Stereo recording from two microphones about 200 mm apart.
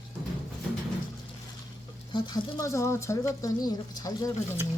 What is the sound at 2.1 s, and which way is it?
Speech, 20° left (ahead or behind).